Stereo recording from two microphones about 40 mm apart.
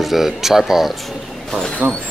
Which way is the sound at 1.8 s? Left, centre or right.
Right.